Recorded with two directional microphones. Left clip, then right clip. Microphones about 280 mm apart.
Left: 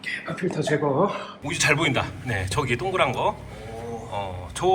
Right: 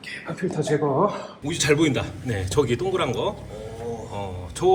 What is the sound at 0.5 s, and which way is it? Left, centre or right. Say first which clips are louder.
Speech: right 1 dB; right.